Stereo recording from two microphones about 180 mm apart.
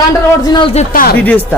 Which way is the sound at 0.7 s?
50° left (ahead or behind).